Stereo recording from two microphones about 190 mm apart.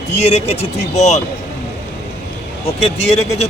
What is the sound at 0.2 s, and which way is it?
Speech, 35° left (ahead or behind).